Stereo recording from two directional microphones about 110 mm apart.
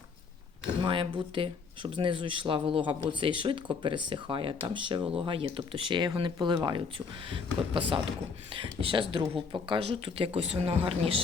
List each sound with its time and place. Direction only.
0.8 s speech: 50° right (ahead or behind)